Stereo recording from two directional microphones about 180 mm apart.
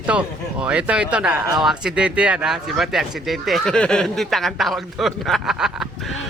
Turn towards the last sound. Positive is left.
turn(degrees=0)  # may be behind; listen again after turning